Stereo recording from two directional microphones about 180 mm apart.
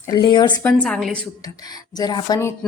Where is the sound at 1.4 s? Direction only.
20° left (ahead or behind).